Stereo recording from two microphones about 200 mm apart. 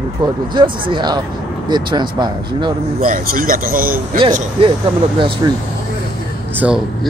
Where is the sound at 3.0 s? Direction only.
45° right (ahead or behind).